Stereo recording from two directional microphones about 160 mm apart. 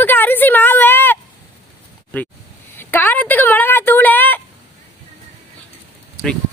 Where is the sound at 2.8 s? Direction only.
10° left (ahead or behind).